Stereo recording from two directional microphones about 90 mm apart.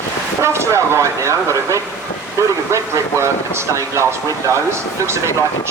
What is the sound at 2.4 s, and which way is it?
Vehicle, 30° right (ahead or behind).